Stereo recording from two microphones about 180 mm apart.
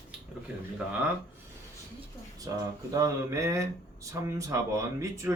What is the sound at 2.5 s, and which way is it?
Speech, 20° right (ahead or behind).